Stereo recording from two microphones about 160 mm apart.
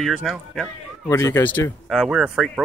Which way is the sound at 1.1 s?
15° left (ahead or behind).